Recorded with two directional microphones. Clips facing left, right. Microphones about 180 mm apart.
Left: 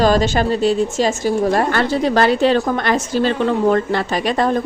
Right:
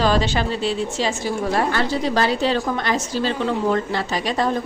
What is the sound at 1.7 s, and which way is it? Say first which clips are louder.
A woman's voice: left 4 dB; 60° left (ahead or behind).